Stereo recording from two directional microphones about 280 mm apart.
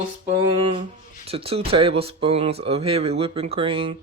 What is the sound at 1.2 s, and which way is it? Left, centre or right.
Speech, right.